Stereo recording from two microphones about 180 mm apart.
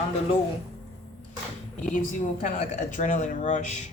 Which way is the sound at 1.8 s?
45° left (ahead or behind).